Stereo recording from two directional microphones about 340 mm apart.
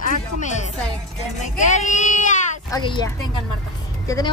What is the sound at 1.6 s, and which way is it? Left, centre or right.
Speech, left.